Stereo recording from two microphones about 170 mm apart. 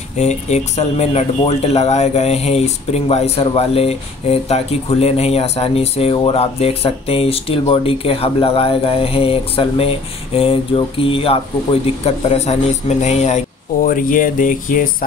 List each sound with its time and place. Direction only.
0.2 s speech: 40° left (ahead or behind)
13.8 s speech: 55° left (ahead or behind)